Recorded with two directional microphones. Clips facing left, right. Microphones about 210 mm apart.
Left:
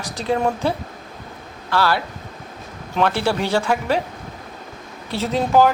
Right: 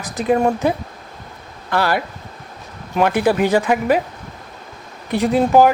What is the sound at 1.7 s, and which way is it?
Speech, 15° right (ahead or behind).